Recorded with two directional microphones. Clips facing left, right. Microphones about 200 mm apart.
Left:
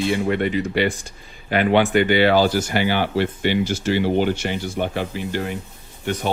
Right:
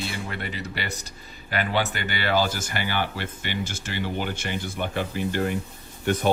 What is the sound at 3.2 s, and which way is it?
Speech, 50° right (ahead or behind).